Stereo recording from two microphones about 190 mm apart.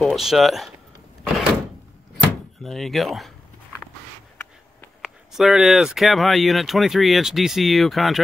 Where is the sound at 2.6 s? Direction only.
Centre (ahead or behind).